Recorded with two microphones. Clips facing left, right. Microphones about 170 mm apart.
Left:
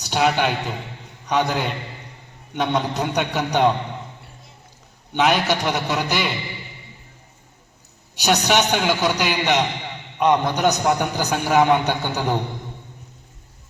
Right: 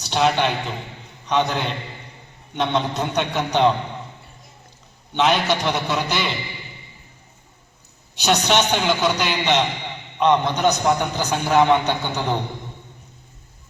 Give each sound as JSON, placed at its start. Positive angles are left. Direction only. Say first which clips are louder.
{"t": 0.0, "sound": "a man's voice", "louder": "even", "side_deg": 10}
{"t": 5.1, "sound": "a man's voice", "louder": "even", "side_deg": 15}
{"t": 8.2, "sound": "a man's voice", "louder": "even", "side_deg": 15}
{"t": 8.6, "sound": "a man's voice", "louder": "even", "side_deg": 5}